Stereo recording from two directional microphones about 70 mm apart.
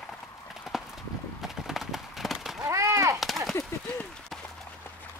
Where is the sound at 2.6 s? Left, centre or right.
Right.